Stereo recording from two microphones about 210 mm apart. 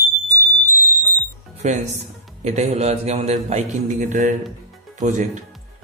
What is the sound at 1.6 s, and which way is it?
A man's voice, 30° right (ahead or behind).